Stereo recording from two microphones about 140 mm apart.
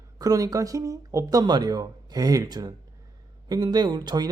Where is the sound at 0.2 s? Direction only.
25° right (ahead or behind).